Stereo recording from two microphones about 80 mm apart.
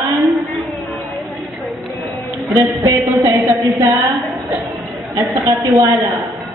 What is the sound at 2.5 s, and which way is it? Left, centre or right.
Speech, right.